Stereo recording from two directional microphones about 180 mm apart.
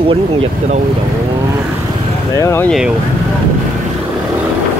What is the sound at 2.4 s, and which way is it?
Speech, 15° left (ahead or behind).